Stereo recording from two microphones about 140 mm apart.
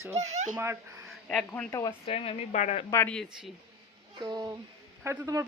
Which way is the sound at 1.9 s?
45° left (ahead or behind).